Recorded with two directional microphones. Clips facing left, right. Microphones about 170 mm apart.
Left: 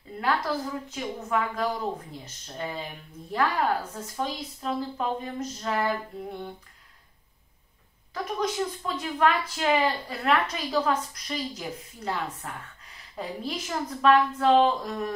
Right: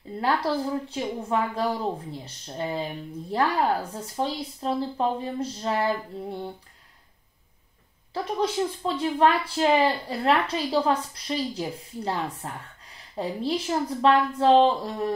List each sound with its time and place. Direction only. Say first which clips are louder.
0.2 s speech: right 3 dB; 30° right (ahead or behind)
8.1 s speech: right 3 dB; 30° right (ahead or behind)